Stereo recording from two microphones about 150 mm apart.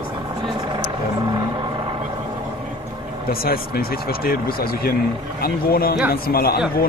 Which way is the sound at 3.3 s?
90° left.